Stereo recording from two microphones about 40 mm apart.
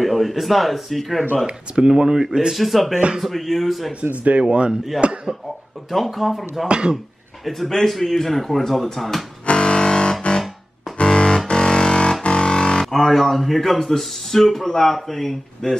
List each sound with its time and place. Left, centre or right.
0.0 s speech: centre
1.8 s speech: centre
2.5 s speech: centre
4.2 s speech: right
4.5 s speech: right
5.9 s speech: centre
9.5 s music: left
12.9 s speech: centre